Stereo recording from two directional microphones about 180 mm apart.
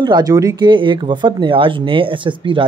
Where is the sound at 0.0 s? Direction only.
20° right (ahead or behind).